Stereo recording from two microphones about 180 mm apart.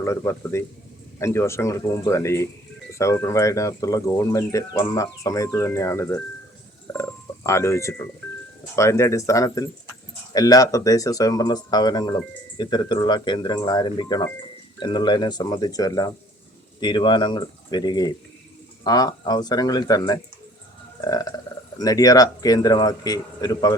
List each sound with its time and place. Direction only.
0.0 s speech: 15° left (ahead or behind)